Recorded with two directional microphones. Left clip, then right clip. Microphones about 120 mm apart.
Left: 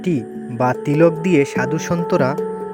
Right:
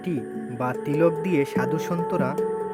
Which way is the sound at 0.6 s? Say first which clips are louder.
Left 7 dB; 50° left (ahead or behind).